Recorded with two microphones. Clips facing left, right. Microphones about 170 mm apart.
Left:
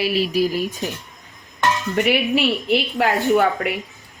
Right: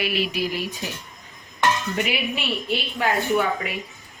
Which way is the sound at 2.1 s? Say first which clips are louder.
Left 8 dB; 70° left (ahead or behind).